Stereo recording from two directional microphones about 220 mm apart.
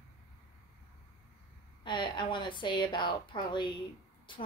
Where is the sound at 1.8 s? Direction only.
20° left (ahead or behind).